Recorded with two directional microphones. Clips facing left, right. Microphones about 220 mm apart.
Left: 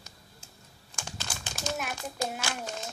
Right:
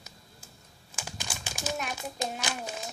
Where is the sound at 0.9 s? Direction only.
10° right (ahead or behind).